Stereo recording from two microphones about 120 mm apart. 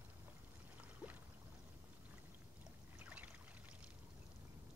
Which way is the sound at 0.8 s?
15° right (ahead or behind).